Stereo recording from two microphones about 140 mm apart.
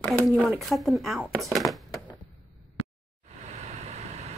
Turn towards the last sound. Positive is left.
turn(degrees=-50)  # may be behind; listen again after turning